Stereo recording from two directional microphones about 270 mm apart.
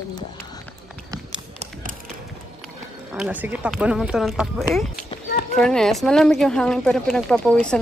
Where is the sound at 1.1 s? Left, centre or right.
Centre.